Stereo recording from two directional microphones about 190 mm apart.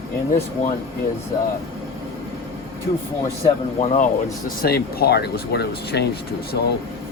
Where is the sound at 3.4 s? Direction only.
40° left (ahead or behind).